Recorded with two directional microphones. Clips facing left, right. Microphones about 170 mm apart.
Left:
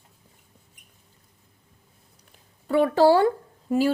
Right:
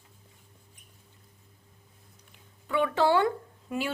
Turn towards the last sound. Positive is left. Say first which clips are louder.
# left 10 dB
turn(degrees=35)  # may be behind; listen again after turning